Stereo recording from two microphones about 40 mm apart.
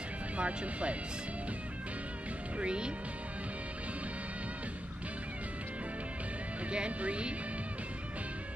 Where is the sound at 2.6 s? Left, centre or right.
Right.